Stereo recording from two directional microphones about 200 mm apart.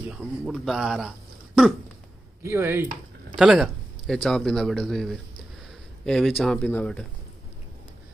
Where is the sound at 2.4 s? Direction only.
10° right (ahead or behind); by 7.0 s 5° left (ahead or behind).